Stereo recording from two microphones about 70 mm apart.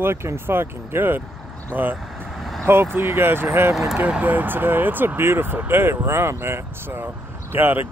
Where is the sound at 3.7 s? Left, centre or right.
Centre.